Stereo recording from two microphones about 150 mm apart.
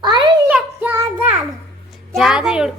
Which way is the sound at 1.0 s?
10° right (ahead or behind).